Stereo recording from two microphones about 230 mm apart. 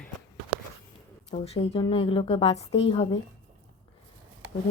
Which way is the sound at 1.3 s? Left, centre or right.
Left.